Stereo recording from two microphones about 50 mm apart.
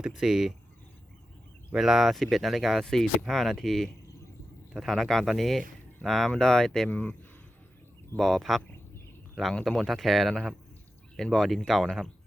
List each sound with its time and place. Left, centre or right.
0.0 s speech: centre
1.7 s speech: centre
2.8 s speech: centre
6.9 s a man's voice: left
8.2 s speech: centre
9.6 s speech: centre